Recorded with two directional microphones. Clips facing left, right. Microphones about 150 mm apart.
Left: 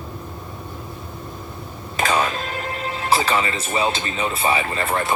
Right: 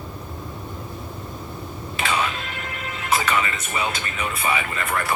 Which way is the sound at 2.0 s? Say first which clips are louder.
Left 4 dB; 40° left (ahead or behind).